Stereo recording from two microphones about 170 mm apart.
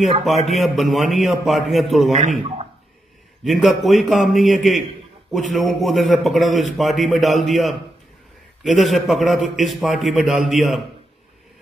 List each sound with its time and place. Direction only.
0.5 s a man's voice: centre (ahead or behind)
2.1 s a man's voice: 40° right (ahead or behind)
3.4 s a man's voice: centre (ahead or behind)